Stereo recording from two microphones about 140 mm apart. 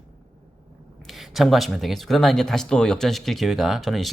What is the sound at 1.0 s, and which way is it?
Speech, centre (ahead or behind).